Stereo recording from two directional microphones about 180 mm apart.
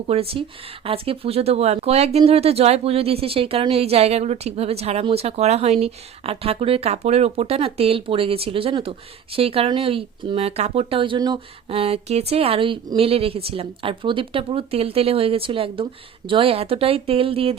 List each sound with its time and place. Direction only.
0.1 s speech: 35° right (ahead or behind)